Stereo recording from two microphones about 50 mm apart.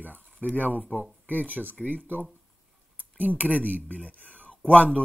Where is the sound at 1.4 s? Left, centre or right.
Right.